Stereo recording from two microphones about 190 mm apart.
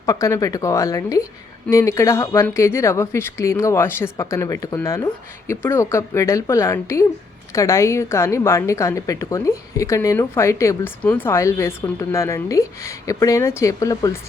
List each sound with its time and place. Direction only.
0.0 s a woman's voice: 15° left (ahead or behind)